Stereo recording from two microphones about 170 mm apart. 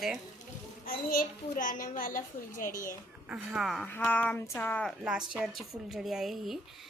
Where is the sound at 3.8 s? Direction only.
10° left (ahead or behind).